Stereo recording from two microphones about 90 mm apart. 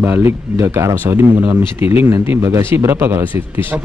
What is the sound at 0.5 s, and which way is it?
A man's voice, 30° right (ahead or behind).